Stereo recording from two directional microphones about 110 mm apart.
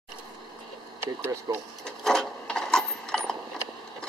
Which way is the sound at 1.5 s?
35° right (ahead or behind).